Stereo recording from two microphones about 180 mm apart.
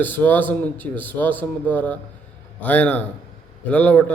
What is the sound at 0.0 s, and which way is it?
A man's voice, 10° left (ahead or behind).